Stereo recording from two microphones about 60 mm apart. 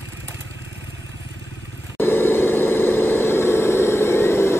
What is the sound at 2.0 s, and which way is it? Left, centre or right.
Vehicle, left.